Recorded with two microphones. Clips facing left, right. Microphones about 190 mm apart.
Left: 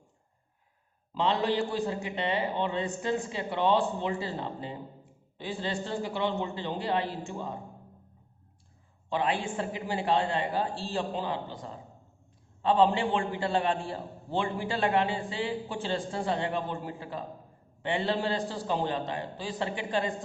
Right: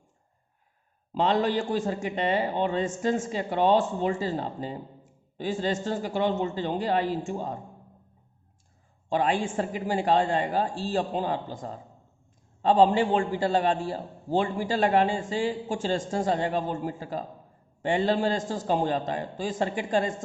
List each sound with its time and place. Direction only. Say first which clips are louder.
1.1 s a man's voice: right 3 dB; 45° right (ahead or behind)
9.0 s a man's voice: right 4 dB; 45° right (ahead or behind)